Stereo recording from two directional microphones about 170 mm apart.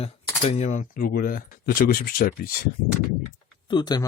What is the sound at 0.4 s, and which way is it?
Speech, 45° left (ahead or behind).